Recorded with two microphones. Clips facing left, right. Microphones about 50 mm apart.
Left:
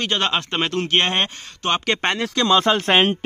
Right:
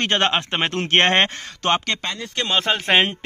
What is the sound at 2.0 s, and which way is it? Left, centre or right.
Speech, left.